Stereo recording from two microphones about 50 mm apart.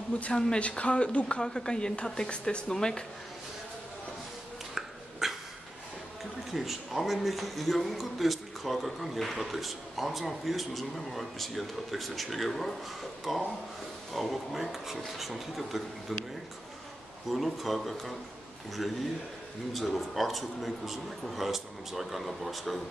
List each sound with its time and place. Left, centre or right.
0.2 s a woman's voice: centre
5.2 s dog: centre
6.5 s a man's voice: centre
17.3 s a man's voice: centre